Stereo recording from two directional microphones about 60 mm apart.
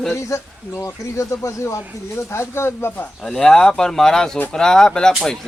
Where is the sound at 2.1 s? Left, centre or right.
Left.